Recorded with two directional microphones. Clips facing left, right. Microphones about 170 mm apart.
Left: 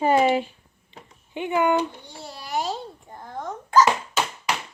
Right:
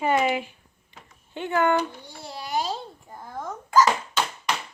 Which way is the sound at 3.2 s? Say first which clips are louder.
Left 2 dB; 20° left (ahead or behind).